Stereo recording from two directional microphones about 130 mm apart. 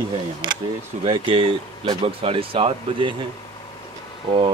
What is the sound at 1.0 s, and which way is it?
Speech, 45° right (ahead or behind).